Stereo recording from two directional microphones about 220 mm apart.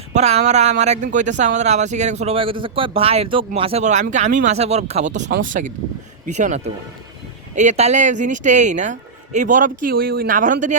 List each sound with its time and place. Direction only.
0.1 s speech: 30° right (ahead or behind)